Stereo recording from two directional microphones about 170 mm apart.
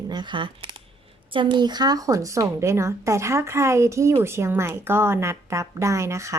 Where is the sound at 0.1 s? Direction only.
25° right (ahead or behind).